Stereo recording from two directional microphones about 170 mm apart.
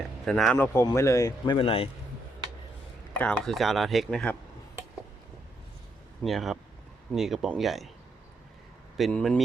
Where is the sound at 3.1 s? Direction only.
10° left (ahead or behind).